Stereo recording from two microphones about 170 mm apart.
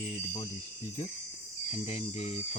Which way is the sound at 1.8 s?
40° left (ahead or behind).